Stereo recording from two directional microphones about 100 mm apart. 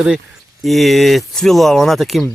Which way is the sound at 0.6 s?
Centre (ahead or behind).